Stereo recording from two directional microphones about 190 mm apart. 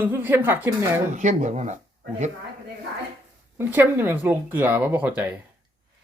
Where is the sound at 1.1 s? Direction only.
40° right (ahead or behind).